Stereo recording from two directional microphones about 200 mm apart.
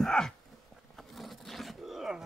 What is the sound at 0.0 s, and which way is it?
Dog, 5° left (ahead or behind).